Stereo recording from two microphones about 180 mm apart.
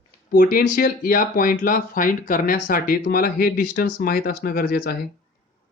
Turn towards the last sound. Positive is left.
turn(degrees=55)  # may be behind; listen again after turning